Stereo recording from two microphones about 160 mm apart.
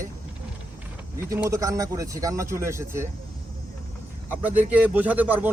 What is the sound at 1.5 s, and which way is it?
Speech, 20° right (ahead or behind).